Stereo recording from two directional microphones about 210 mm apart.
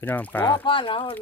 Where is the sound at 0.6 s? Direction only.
25° left (ahead or behind).